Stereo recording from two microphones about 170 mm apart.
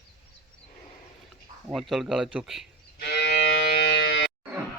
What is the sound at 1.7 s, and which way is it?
Speech, centre (ahead or behind).